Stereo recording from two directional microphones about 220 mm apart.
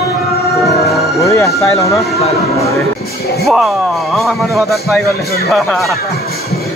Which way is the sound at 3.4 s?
Centre (ahead or behind).